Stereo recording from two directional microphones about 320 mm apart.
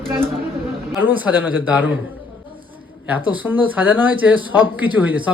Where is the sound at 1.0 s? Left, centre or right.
Centre.